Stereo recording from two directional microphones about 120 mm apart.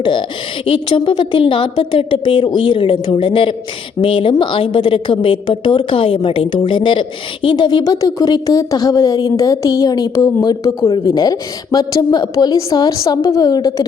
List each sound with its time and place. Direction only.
0.0 s a woman's voice: 45° left (ahead or behind)